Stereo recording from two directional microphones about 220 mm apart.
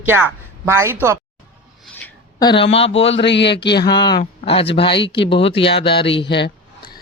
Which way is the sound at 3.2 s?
50° left (ahead or behind).